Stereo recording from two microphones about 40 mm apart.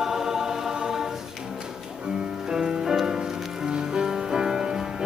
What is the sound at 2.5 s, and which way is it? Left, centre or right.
Music, centre.